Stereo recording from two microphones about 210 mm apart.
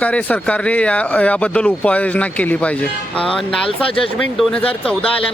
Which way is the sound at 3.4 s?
25° left (ahead or behind).